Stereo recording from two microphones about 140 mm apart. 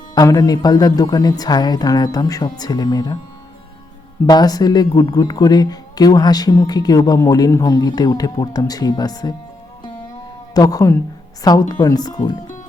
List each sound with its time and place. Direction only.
0.1 s speech: 25° left (ahead or behind)
4.3 s speech: 30° left (ahead or behind)
10.5 s speech: 25° left (ahead or behind)